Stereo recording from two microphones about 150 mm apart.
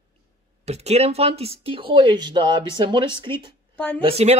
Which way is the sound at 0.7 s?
45° right (ahead or behind).